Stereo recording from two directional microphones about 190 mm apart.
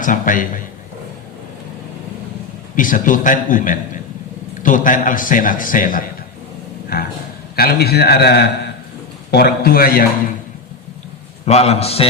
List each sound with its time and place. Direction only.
0.0 s a man's voice: 45° left (ahead or behind)
2.7 s a man's voice: 45° left (ahead or behind)
11.4 s a man's voice: 35° left (ahead or behind)